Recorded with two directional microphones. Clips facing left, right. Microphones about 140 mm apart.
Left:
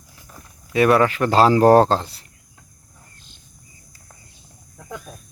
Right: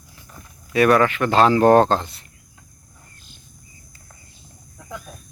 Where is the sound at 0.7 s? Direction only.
25° left (ahead or behind).